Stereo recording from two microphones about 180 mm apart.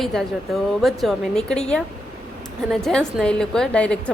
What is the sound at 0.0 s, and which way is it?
A woman's voice, centre (ahead or behind).